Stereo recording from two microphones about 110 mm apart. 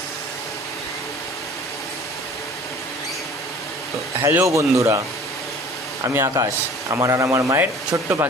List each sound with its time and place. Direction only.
4.3 s speech: 25° right (ahead or behind)
6.1 s a man's voice: 30° right (ahead or behind)